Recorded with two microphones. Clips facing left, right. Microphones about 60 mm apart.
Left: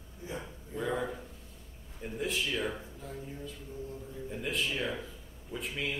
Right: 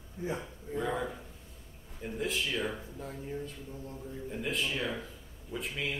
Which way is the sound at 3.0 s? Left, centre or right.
Right.